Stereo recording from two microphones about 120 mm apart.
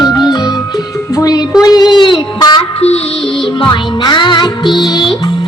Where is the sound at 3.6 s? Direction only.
40° left (ahead or behind).